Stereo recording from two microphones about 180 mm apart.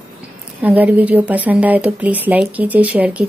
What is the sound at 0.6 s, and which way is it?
A woman's voice, 10° right (ahead or behind).